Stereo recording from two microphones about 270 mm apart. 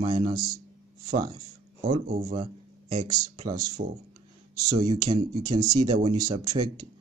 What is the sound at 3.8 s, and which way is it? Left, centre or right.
Speech, right.